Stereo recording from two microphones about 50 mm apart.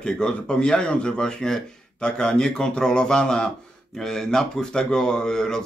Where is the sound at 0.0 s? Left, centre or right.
Centre.